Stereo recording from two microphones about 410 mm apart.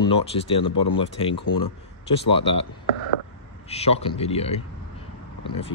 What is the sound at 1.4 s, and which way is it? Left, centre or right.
Speech, left.